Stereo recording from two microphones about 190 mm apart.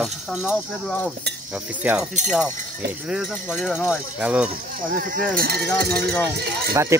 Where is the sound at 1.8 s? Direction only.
5° right (ahead or behind).